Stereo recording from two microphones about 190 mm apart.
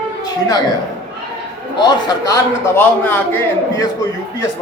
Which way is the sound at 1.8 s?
20° left (ahead or behind).